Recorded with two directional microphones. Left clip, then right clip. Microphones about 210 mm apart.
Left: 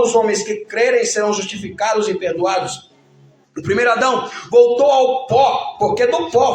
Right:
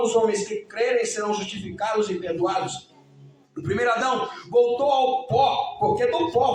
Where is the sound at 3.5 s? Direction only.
25° left (ahead or behind).